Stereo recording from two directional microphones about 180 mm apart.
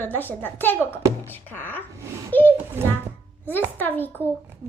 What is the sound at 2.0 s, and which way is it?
Babbling, 15° right (ahead or behind).